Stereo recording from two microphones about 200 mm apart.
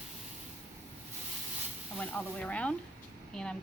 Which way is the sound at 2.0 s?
5° left (ahead or behind).